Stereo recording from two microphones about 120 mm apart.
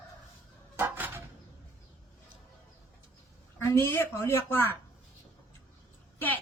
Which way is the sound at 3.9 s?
20° left (ahead or behind).